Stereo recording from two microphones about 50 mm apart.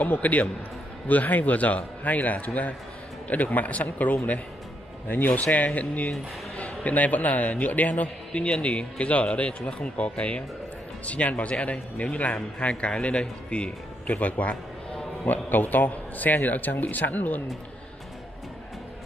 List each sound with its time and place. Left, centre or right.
0.0 s a man's voice: left